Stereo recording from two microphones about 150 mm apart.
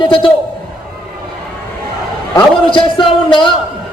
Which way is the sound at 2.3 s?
35° left (ahead or behind).